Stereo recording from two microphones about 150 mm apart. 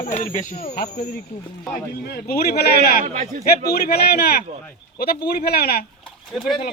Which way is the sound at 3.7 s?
90° left.